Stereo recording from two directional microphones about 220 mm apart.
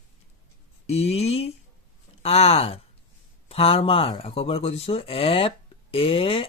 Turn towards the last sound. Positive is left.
turn(degrees=25)  # may be behind; listen again after turning